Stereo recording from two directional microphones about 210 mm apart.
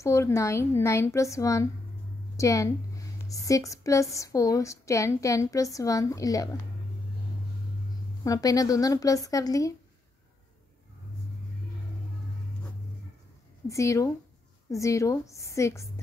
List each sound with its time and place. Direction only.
0.0 s a woman's voice: 15° left (ahead or behind)
8.2 s a woman's voice: 15° left (ahead or behind)
13.7 s a woman's voice: 15° left (ahead or behind)